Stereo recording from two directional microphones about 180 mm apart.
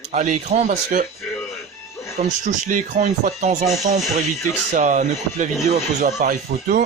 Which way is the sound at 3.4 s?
40° right (ahead or behind).